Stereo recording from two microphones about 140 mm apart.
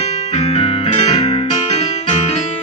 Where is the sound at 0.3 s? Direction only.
45° left (ahead or behind).